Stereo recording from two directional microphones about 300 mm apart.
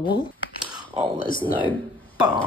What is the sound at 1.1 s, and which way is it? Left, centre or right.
Speech, left.